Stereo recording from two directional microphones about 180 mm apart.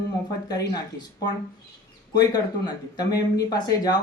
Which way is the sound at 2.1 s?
20° left (ahead or behind).